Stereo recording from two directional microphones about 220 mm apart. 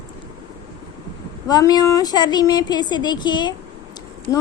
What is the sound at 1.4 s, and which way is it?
A woman's voice, 15° left (ahead or behind).